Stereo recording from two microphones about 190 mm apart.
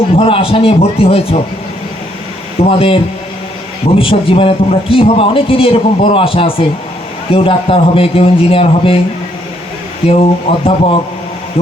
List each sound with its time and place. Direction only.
0.1 s a man's voice: 30° left (ahead or behind)
2.6 s a man's voice: 30° left (ahead or behind)
10.1 s a man's voice: 30° left (ahead or behind)